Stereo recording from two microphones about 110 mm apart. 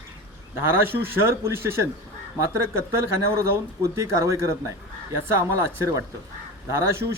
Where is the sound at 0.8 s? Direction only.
20° right (ahead or behind).